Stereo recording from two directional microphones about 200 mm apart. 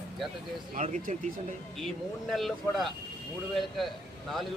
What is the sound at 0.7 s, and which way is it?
Speech, 35° right (ahead or behind).